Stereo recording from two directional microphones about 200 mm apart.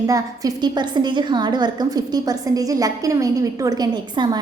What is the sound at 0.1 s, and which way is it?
A woman's voice, 20° right (ahead or behind).